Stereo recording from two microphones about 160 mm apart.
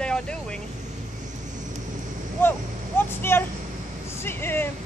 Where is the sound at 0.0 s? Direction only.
5° left (ahead or behind).